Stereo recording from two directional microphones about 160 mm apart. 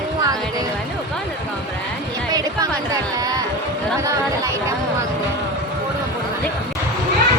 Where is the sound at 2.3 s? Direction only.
20° right (ahead or behind).